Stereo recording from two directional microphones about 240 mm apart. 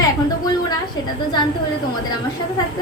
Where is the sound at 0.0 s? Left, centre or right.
Centre.